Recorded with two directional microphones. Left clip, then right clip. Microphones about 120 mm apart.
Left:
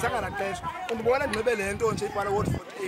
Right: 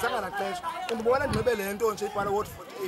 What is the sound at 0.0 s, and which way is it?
Speech, centre (ahead or behind).